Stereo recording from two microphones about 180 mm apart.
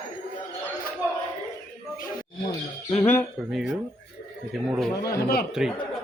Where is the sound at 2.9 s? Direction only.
10° left (ahead or behind).